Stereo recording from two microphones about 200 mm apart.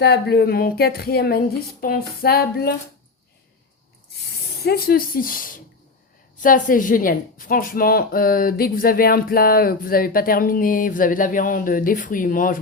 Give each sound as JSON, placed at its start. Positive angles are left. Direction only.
{"t": 0.0, "sound": "a woman's voice", "side_deg": 55}
{"t": 4.6, "sound": "a woman's voice", "side_deg": 50}